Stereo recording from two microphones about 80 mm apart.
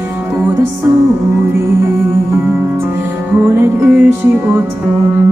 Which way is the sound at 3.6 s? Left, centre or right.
Right.